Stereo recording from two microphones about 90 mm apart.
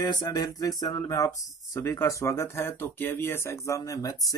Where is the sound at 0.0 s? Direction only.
50° left (ahead or behind).